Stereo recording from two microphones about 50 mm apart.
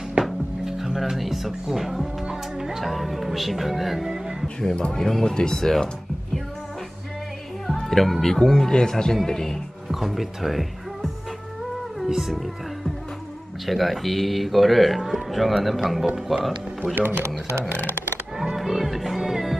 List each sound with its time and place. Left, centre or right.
0.2 s speech: centre
4.6 s speech: centre
7.6 s speech: centre
12.1 s music: centre
13.7 s a man's voice: centre
16.8 s speech: right
18.4 s music: centre